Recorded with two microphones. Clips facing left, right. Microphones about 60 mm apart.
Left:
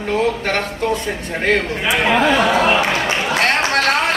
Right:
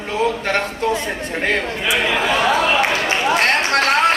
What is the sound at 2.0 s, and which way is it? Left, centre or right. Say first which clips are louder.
Speech: left 6 dB; left.